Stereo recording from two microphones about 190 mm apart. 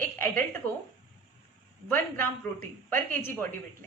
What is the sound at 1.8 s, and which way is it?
A woman's voice, 10° left (ahead or behind).